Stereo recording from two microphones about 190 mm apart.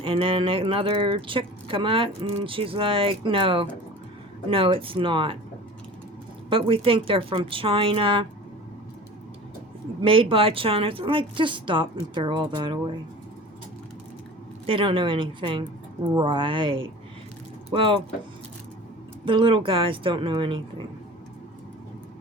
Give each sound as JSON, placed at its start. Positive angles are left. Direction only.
{"t": 0.0, "sound": "speech", "side_deg": -25}
{"t": 6.5, "sound": "speech", "side_deg": -30}
{"t": 10.0, "sound": "speech", "side_deg": -30}
{"t": 14.7, "sound": "speech", "side_deg": -25}
{"t": 19.2, "sound": "speech", "side_deg": -25}